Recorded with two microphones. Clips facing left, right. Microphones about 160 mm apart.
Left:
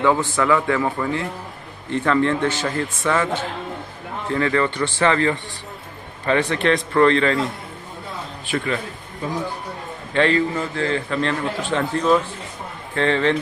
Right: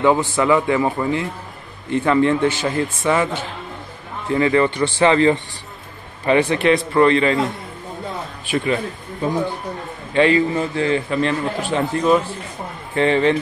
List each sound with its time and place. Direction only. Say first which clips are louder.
0.0 s a man's voice: right 2 dB; 20° right (ahead or behind)
4.3 s a man's voice: right 4 dB; 15° right (ahead or behind)
8.5 s a man's voice: right 4 dB; 20° right (ahead or behind)
10.1 s a man's voice: right 3 dB; 10° right (ahead or behind)